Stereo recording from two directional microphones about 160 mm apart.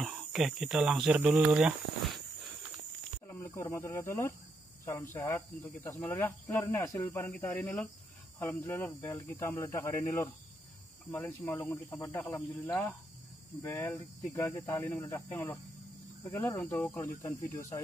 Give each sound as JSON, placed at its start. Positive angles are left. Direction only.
{"t": 0.0, "sound": "speech", "side_deg": -5}
{"t": 3.3, "sound": "speech", "side_deg": 15}
{"t": 13.6, "sound": "speech", "side_deg": 15}